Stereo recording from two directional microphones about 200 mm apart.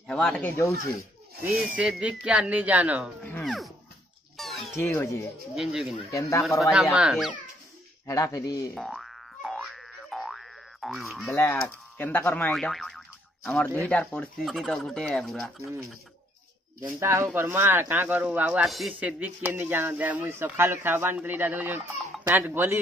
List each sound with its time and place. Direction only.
0.0 s speech: 5° left (ahead or behind)
1.4 s speech: centre (ahead or behind)
3.4 s music: centre (ahead or behind)
4.4 s cat: centre (ahead or behind)
4.7 s speech: 10° left (ahead or behind)
5.5 s speech: centre (ahead or behind)
8.1 s speech: 15° left (ahead or behind)
8.7 s boing: centre (ahead or behind)
12.0 s speech: 10° left (ahead or behind)
15.6 s speech: 15° right (ahead or behind)